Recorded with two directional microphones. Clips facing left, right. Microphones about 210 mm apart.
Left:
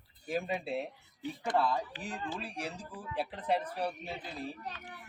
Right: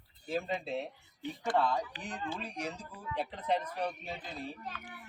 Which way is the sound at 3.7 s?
10° left (ahead or behind).